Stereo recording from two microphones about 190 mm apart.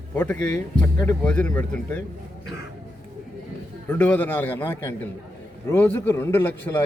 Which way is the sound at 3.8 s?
10° left (ahead or behind).